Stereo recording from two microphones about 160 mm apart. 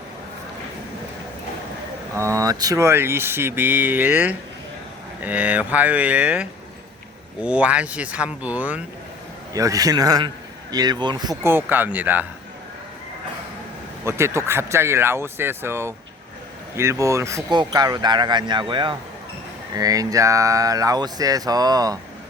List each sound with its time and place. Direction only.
2.1 s speech: 20° right (ahead or behind)
9.5 s a man's voice: 20° right (ahead or behind)
11.4 s speech: 10° right (ahead or behind)
14.0 s speech: 15° right (ahead or behind)